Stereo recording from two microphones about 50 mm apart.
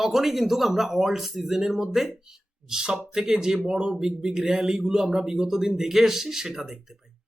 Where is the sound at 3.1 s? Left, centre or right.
Centre.